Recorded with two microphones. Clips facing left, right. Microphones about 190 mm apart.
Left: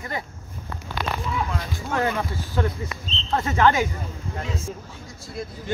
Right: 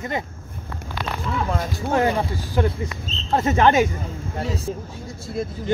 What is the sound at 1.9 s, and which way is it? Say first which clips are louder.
Speech: right 4 dB; 30° right (ahead or behind).